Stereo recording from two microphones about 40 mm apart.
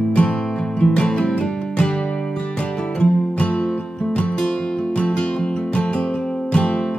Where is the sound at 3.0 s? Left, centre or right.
Left.